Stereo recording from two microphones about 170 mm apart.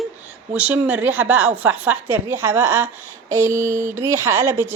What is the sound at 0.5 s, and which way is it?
A woman's voice, 10° right (ahead or behind).